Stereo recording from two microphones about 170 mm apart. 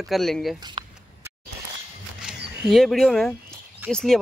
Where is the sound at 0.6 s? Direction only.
25° right (ahead or behind).